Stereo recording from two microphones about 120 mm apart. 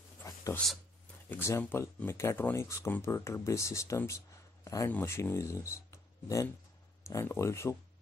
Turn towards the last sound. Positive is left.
turn(degrees=25)  # may be behind; listen again after turning